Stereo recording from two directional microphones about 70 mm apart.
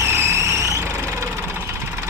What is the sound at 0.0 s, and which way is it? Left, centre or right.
Vehicle, right.